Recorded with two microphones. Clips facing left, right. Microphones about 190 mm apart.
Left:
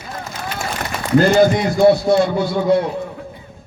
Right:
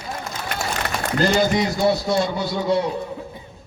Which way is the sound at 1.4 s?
55° left (ahead or behind).